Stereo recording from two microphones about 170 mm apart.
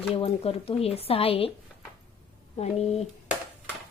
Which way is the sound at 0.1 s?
35° left (ahead or behind).